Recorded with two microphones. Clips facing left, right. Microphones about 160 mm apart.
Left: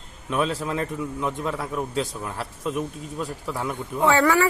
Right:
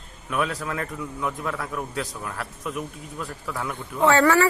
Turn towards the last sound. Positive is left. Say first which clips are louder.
# right 1 dB
turn(degrees=10)  # may be behind; listen again after turning